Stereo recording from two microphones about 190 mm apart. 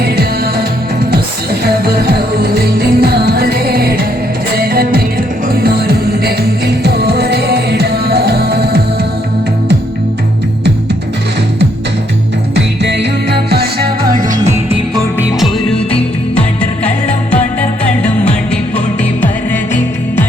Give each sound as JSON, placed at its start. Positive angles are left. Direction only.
{"t": 1.6, "sound": "music", "side_deg": -55}
{"t": 12.5, "sound": "music", "side_deg": -65}
{"t": 18.0, "sound": "music", "side_deg": 5}